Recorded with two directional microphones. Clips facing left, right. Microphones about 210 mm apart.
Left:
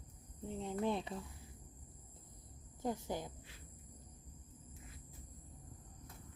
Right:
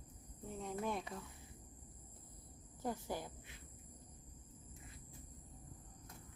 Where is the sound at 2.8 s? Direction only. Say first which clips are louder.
Left 2 dB; 20° left (ahead or behind).